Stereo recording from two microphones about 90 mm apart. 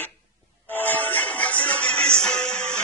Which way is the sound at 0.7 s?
20° left (ahead or behind).